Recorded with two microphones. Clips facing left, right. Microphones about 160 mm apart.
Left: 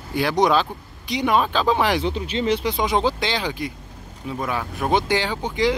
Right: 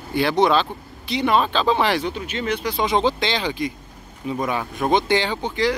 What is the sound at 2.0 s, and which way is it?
Speech, 30° left (ahead or behind).